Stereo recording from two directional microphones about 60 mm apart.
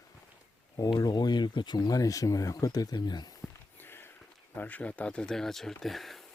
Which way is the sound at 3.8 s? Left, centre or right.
Left.